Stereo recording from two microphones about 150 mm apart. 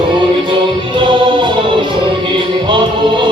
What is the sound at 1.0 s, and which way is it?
Music, 30° right (ahead or behind).